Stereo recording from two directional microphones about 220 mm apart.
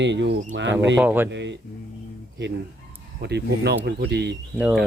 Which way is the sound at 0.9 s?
10° right (ahead or behind).